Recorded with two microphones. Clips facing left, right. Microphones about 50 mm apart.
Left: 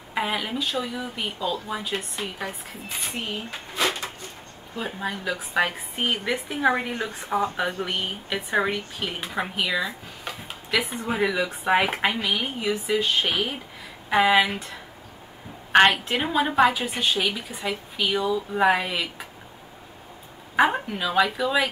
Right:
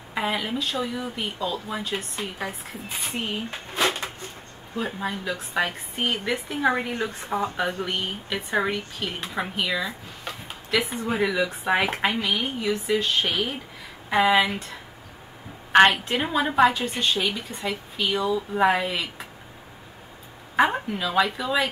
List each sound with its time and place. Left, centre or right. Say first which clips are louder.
0.1 s speech: even; centre
3.7 s a sound: right 1 dB; right
4.7 s speech: right 1 dB; centre
15.7 s speech: right 1 dB; centre
20.5 s speech: even; centre